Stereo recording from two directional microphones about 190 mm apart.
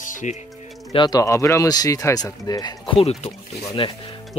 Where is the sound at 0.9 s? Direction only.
20° left (ahead or behind).